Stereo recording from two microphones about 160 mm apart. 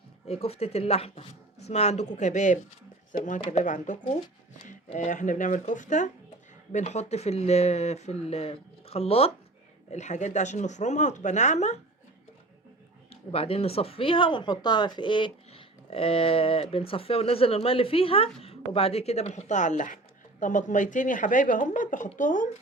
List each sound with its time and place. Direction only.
0.3 s a woman's voice: 40° left (ahead or behind)
13.1 s a woman's voice: 35° left (ahead or behind); by 22.4 s 55° left (ahead or behind)